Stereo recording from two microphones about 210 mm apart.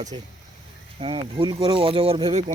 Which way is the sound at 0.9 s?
25° right (ahead or behind).